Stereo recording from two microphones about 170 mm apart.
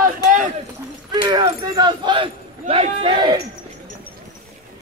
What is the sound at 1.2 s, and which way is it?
Speech, 25° right (ahead or behind).